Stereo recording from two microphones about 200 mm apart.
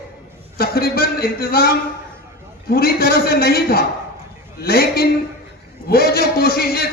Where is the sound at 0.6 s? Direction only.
50° left (ahead or behind).